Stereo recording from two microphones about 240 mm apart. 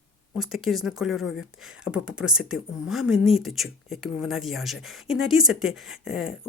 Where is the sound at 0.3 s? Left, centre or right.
Centre.